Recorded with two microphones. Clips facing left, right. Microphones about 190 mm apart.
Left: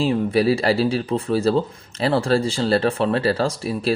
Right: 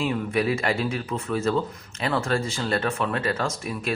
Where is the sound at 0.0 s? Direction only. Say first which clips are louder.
Left 6 dB; 30° left (ahead or behind).